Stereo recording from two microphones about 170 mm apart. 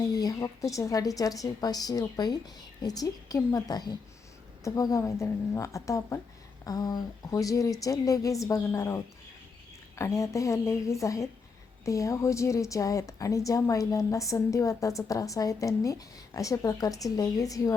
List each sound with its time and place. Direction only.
0.0 s a woman's voice: 20° left (ahead or behind)